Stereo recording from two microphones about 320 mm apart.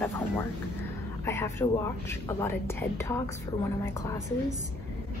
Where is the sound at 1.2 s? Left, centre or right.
Centre.